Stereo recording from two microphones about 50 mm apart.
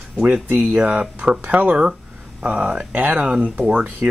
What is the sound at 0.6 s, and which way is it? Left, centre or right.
Speech, right.